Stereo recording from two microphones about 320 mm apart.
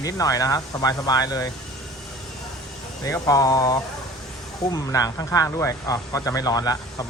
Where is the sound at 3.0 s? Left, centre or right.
Centre.